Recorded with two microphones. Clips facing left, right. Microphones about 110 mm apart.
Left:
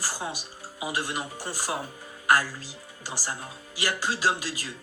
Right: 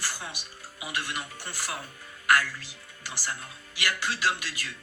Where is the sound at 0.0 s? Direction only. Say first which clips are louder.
Left 4 dB; 35° left (ahead or behind).